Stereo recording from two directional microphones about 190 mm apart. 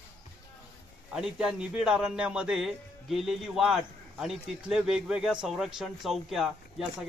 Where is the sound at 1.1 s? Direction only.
5° right (ahead or behind).